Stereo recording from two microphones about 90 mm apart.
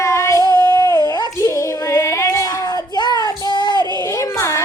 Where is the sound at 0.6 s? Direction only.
50° left (ahead or behind).